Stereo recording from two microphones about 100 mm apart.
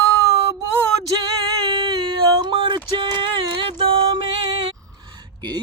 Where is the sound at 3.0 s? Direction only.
50° right (ahead or behind).